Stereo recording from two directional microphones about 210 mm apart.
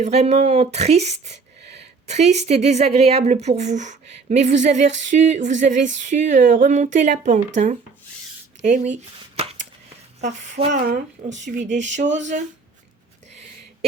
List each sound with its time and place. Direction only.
0.0 s speech: 30° right (ahead or behind)
8.6 s a sound: 35° right (ahead or behind)
10.2 s speech: 35° right (ahead or behind)
11.8 s speech: 60° right (ahead or behind)